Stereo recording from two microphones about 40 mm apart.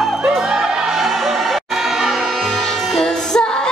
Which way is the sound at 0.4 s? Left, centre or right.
Centre.